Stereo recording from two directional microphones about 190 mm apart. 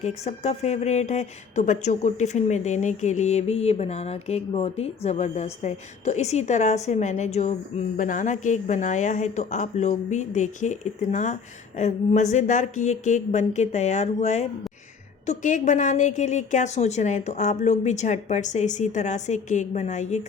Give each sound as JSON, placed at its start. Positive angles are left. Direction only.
{"t": 0.0, "sound": "speech", "side_deg": 35}